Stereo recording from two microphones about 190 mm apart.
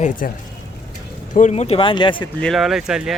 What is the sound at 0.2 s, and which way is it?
Speech, 50° left (ahead or behind).